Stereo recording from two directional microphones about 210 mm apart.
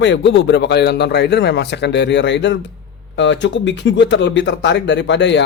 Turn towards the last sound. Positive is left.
turn(degrees=55)  # may be behind; listen again after turning